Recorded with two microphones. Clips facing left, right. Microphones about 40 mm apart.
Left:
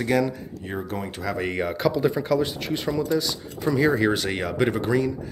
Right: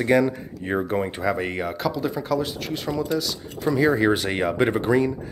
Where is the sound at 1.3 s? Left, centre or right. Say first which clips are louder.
Left 1 dB; centre.